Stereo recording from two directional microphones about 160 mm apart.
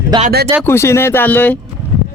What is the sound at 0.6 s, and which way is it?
Speech, 15° left (ahead or behind).